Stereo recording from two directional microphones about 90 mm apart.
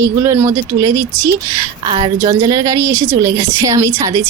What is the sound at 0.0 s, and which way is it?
A woman's voice, 30° right (ahead or behind).